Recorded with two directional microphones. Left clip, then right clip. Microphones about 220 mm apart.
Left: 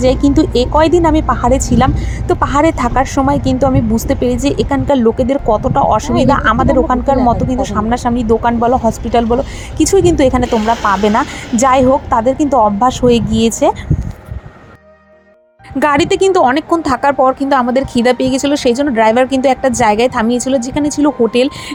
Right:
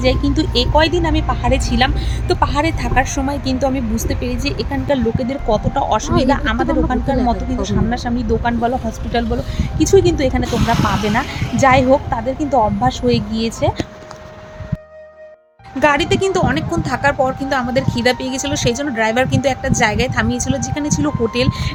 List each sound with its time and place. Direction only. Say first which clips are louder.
0.0 s speech: left 6 dB; 25° left (ahead or behind)
15.8 s speech: left 3 dB; 30° left (ahead or behind)